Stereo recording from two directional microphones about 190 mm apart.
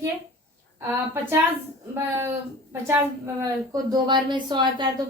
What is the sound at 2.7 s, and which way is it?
A woman's voice, 15° right (ahead or behind).